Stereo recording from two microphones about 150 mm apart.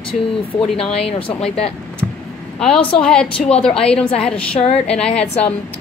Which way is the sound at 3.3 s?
45° left (ahead or behind).